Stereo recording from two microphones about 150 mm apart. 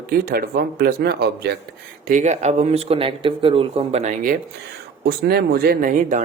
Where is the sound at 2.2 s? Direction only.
50° right (ahead or behind).